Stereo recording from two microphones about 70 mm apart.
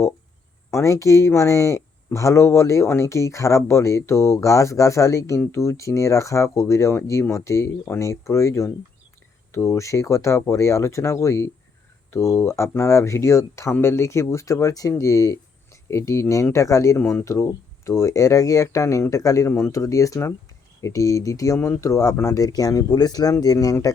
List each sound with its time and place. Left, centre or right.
0.7 s speech: left
22.9 s speech: left
23.4 s speech: left